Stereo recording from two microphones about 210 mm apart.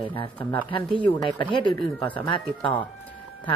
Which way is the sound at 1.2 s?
25° left (ahead or behind).